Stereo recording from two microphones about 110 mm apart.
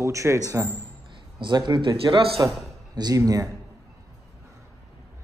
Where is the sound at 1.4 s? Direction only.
45° right (ahead or behind).